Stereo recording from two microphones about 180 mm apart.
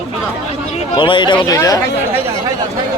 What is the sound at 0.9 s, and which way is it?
Speech, 25° left (ahead or behind).